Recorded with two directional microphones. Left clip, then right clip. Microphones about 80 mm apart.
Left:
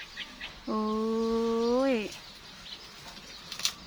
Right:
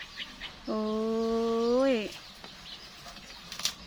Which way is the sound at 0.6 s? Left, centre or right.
Centre.